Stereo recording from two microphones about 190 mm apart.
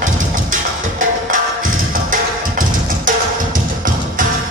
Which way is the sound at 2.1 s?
45° right (ahead or behind).